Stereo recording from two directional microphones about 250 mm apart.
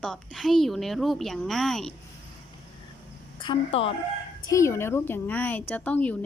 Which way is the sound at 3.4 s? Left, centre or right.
Left.